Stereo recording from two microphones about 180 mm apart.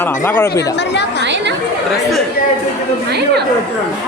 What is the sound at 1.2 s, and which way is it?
Chatter, 75° right (ahead or behind).